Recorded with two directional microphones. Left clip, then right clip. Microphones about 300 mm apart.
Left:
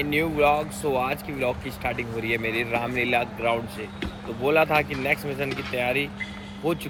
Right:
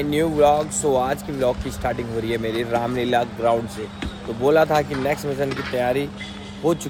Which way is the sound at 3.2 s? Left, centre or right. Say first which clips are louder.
Right 5 dB; centre.